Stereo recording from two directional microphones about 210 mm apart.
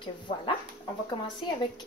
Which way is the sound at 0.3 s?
30° left (ahead or behind).